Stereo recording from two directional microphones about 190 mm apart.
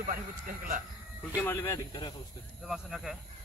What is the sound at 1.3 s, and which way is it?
Speech, 15° left (ahead or behind).